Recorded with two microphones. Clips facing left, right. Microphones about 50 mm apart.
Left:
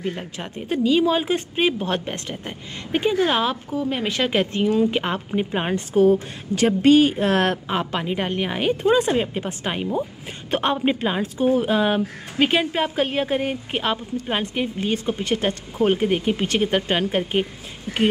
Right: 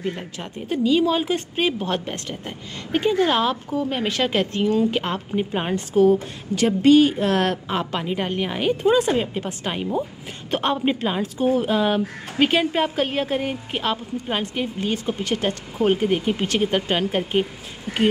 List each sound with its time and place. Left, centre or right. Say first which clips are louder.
0.0 s speech: even; centre
7.6 s speech: left 1 dB; centre